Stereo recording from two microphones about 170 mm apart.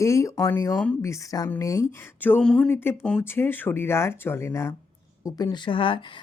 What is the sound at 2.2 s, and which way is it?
Speech, 5° left (ahead or behind).